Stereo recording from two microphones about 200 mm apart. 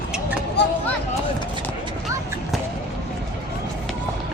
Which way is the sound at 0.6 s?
55° left (ahead or behind).